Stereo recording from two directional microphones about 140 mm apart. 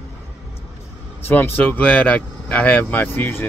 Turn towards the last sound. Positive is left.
turn(degrees=15)  # may be behind; listen again after turning